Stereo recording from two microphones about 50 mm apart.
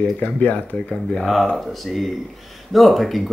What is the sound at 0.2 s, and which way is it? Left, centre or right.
Speech, left.